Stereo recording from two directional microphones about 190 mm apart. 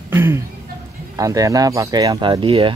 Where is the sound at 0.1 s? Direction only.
10° right (ahead or behind).